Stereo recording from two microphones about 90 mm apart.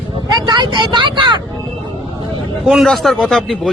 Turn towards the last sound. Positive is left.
turn(degrees=0)  # may be behind; listen again after turning